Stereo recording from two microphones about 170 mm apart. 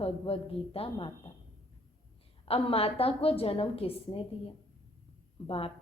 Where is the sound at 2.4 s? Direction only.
35° left (ahead or behind).